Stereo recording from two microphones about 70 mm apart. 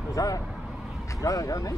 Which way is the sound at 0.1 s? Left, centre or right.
Left.